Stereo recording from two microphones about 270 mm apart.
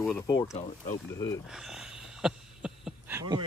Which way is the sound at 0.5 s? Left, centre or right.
Left.